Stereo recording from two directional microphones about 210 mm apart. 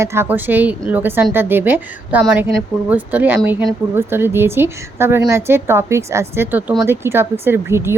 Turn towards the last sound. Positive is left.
turn(degrees=-10)  # may be behind; listen again after turning